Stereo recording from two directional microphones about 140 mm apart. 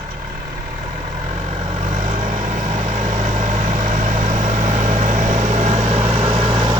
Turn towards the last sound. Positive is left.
turn(degrees=-35)  # may be behind; listen again after turning